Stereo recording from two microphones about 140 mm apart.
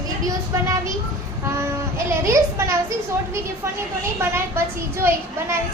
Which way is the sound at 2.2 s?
20° right (ahead or behind).